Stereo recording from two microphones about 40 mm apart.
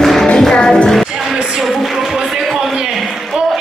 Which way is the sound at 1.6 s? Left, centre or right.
Centre.